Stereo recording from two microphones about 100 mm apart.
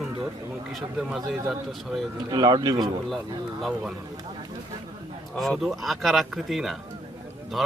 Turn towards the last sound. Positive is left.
turn(degrees=0)  # may be behind; listen again after turning